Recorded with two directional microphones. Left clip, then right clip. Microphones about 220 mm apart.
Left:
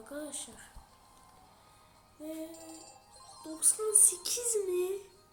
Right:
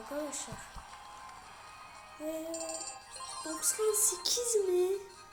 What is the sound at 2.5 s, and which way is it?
Music, 45° right (ahead or behind).